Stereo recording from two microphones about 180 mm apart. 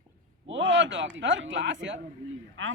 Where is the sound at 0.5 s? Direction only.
90° right.